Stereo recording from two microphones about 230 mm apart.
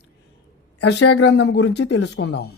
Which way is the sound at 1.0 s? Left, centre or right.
Left.